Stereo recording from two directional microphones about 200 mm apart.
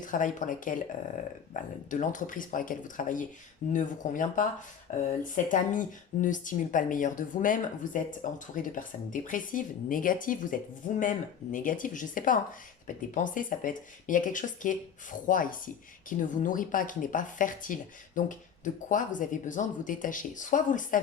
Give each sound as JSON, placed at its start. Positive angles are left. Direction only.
{"t": 0.0, "sound": "speech", "side_deg": 40}